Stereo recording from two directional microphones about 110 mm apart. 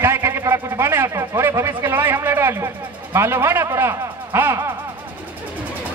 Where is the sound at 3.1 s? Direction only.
20° right (ahead or behind).